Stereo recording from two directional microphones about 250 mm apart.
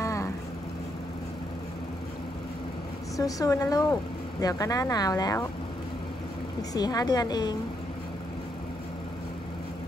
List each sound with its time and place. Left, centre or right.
0.0 s vehicle: centre
3.2 s speech: centre
6.7 s speech: centre